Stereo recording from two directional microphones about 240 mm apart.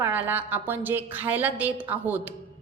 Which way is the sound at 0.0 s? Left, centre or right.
Centre.